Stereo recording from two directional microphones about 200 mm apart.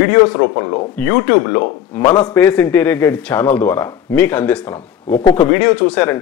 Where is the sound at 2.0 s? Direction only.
20° left (ahead or behind).